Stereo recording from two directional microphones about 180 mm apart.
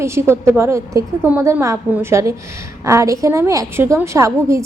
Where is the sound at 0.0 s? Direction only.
15° right (ahead or behind).